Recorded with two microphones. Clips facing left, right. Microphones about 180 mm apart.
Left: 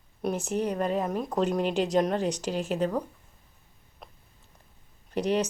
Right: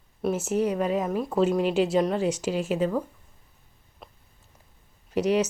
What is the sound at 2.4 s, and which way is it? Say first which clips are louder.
Speech: right 3 dB; 35° left (ahead or behind).